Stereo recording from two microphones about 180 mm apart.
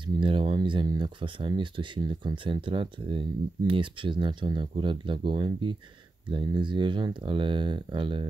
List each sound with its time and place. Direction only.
0.0 s speech: 30° right (ahead or behind)